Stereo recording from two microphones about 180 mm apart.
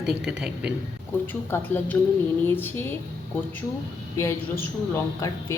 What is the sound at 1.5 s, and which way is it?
Speech, 10° left (ahead or behind).